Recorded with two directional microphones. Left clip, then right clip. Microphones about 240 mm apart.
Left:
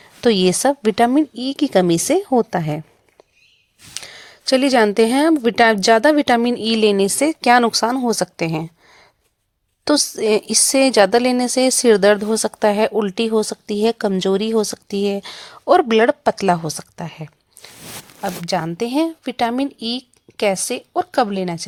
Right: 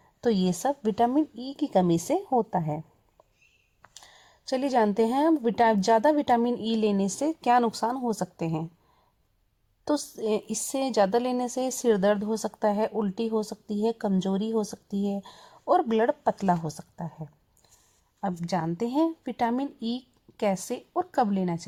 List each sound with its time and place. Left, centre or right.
0.2 s speech: left
3.9 s speech: left
9.8 s speech: left